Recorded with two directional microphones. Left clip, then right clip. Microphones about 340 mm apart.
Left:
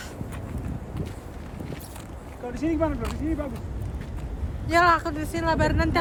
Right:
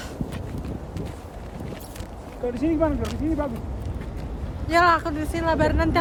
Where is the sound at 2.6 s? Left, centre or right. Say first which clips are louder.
Right 2 dB; right.